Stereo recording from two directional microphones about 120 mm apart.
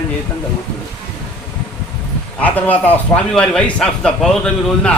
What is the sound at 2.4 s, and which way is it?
A man's voice, 15° left (ahead or behind).